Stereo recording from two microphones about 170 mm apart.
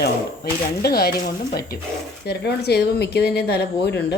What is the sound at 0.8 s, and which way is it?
Speech, 65° left (ahead or behind).